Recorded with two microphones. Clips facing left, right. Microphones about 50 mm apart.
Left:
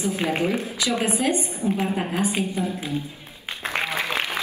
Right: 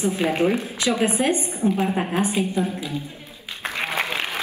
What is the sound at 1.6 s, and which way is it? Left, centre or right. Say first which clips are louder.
Speech: right 4 dB; right.